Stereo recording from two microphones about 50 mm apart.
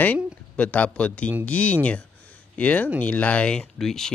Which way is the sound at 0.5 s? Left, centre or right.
Left.